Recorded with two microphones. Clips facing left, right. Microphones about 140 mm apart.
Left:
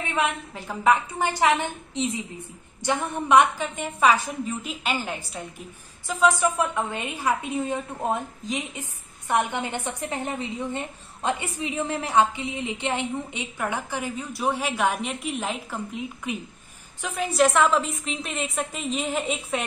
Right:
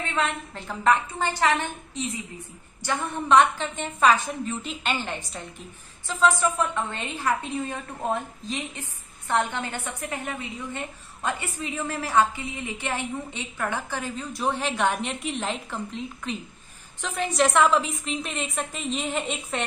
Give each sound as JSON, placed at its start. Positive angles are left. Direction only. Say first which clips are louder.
{"t": 0.1, "sound": "a woman's voice", "louder": "left 3 dB", "side_deg": 10}